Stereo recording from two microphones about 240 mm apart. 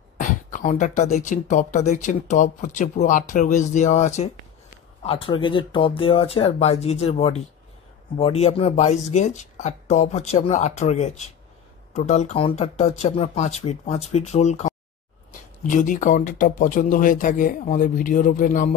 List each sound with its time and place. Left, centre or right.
0.2 s speech: left